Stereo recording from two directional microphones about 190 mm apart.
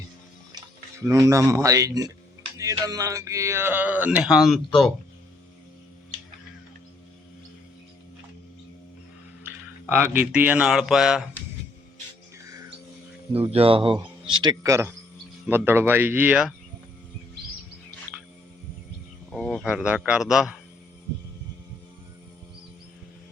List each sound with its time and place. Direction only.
0.5 s speech: 15° right (ahead or behind); by 4.9 s centre (ahead or behind)
9.8 s speech: 10° right (ahead or behind)
13.5 s speech: 30° right (ahead or behind); by 16.6 s 5° right (ahead or behind)
19.3 s speech: 5° left (ahead or behind)